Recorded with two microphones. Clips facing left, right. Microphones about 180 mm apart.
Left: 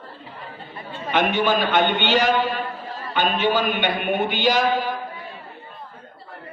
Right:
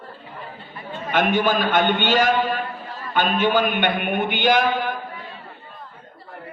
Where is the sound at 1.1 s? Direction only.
45° right (ahead or behind).